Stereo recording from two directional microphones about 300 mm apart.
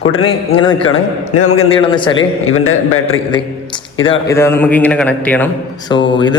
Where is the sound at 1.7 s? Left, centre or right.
Centre.